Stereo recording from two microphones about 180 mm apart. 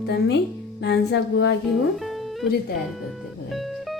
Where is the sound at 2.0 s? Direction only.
Centre (ahead or behind).